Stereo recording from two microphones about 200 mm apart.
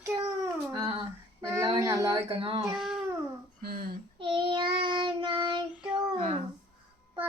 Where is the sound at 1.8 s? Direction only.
15° right (ahead or behind).